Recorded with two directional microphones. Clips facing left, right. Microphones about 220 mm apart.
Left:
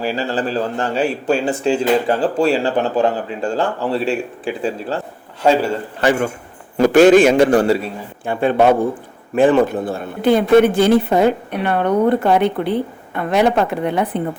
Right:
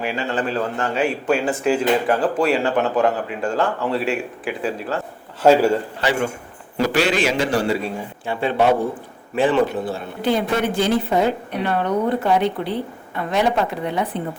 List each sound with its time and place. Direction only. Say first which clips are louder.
0.0 s a man's voice: left 3 dB; 35° left (ahead or behind)
5.4 s a man's voice: right 2 dB; 5° right (ahead or behind)
6.7 s a man's voice: left 10 dB; 50° left (ahead or behind)